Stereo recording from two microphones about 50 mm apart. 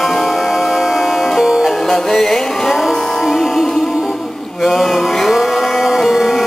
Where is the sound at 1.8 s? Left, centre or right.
Centre.